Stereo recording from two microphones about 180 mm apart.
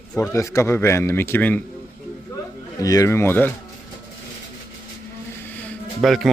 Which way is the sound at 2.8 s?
20° left (ahead or behind).